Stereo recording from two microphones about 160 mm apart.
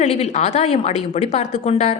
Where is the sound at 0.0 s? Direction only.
45° left (ahead or behind).